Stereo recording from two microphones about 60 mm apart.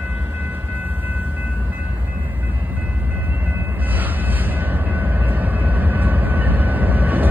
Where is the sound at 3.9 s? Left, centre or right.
Right.